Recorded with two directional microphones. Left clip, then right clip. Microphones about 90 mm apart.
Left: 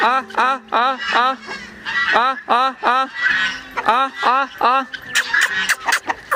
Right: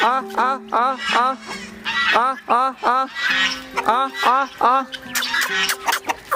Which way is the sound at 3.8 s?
15° right (ahead or behind).